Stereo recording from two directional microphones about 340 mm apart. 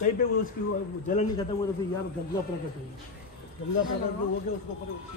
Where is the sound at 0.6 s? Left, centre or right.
Left.